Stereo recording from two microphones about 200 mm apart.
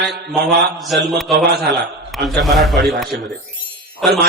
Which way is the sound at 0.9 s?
Centre (ahead or behind).